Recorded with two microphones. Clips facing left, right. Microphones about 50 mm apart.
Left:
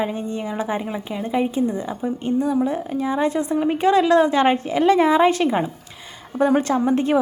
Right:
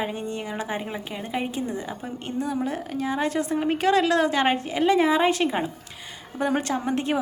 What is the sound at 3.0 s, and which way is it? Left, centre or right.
Speech, left.